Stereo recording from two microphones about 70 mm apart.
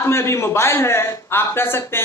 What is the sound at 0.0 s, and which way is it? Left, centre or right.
A man's voice, left.